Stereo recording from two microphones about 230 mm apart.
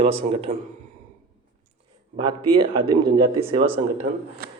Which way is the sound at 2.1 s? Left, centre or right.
Right.